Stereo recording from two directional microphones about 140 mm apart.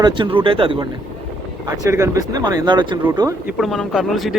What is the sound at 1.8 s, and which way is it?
Speech, 20° right (ahead or behind).